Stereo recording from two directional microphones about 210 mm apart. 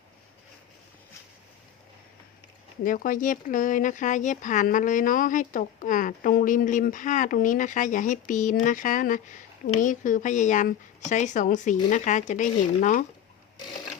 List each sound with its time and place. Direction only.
2.8 s speech: 40° left (ahead or behind)